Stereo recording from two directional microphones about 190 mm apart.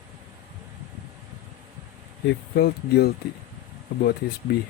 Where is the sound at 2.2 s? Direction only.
60° left (ahead or behind).